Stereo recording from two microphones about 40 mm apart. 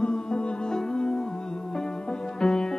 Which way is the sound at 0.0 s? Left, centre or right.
Centre.